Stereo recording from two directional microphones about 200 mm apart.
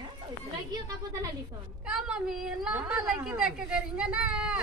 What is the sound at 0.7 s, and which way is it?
Speech, 20° right (ahead or behind).